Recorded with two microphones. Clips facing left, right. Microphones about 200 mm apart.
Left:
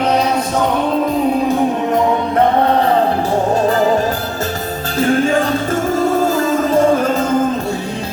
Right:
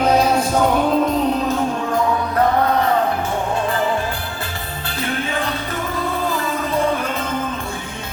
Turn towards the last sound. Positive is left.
turn(degrees=45)  # may be behind; listen again after turning